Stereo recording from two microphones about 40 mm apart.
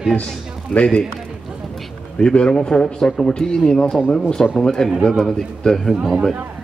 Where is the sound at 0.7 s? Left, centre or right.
Centre.